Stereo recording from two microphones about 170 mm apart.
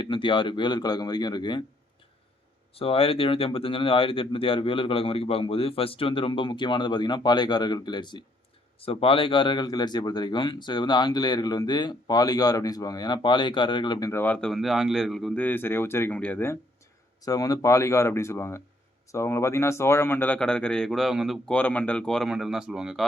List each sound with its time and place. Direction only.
0.0 s speech: 30° left (ahead or behind)
2.7 s speech: 35° left (ahead or behind)
14.1 s speech: 10° left (ahead or behind)
17.2 s speech: 20° left (ahead or behind); by 23.0 s 5° right (ahead or behind)